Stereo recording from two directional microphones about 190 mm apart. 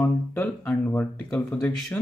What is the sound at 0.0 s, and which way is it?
Speech, 10° left (ahead or behind).